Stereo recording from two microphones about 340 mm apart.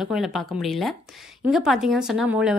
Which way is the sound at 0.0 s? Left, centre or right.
Centre.